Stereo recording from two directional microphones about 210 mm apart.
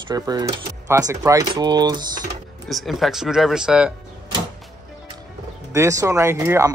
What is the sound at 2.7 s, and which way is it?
Speech, centre (ahead or behind).